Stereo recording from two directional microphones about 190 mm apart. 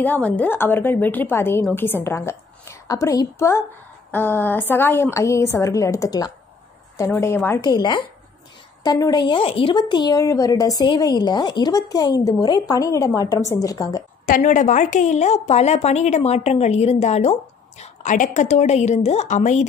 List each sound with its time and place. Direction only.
0.0 s a woman's voice: 10° left (ahead or behind)
14.2 s a woman's voice: 45° left (ahead or behind)